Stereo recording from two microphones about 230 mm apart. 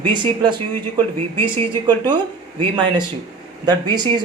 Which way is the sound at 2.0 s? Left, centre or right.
Centre.